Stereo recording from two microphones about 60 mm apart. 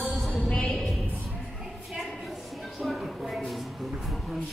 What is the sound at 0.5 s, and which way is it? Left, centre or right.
Music, centre.